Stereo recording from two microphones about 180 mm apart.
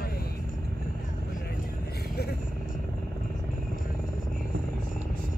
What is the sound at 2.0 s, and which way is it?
Vehicle, 60° left (ahead or behind).